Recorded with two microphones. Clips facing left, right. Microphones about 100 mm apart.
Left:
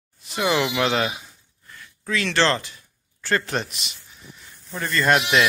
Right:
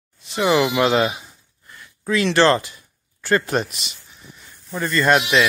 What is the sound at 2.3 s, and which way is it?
Speech, 10° right (ahead or behind).